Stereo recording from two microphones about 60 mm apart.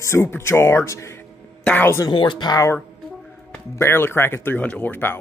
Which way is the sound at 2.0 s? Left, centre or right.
Left.